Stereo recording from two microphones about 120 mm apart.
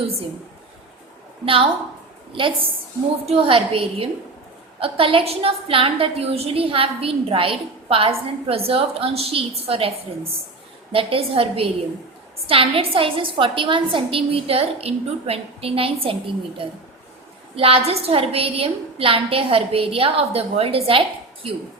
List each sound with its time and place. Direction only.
1.5 s a woman's voice: 50° right (ahead or behind)
10.9 s a woman's voice: 50° right (ahead or behind)